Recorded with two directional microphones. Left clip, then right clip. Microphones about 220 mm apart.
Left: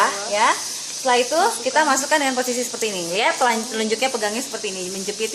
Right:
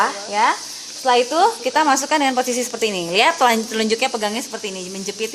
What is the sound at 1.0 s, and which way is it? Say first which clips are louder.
Speech: right 3 dB; 45° right (ahead or behind).